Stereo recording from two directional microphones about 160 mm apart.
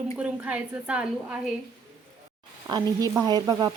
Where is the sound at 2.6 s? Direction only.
25° right (ahead or behind).